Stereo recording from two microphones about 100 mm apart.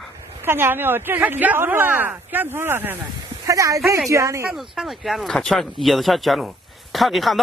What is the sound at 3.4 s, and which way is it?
Speech, 30° right (ahead or behind).